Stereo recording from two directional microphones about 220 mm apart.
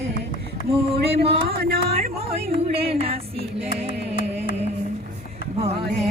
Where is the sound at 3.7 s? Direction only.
40° left (ahead or behind).